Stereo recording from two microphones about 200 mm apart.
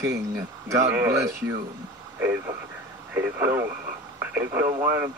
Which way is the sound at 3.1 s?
10° right (ahead or behind).